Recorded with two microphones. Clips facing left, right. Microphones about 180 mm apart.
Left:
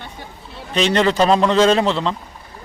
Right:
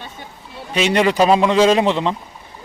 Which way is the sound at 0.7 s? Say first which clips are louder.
Right 1 dB; 10° right (ahead or behind).